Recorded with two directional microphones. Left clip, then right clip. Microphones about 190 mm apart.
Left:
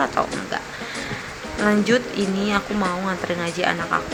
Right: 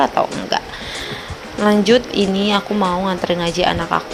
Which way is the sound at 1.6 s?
20° right (ahead or behind).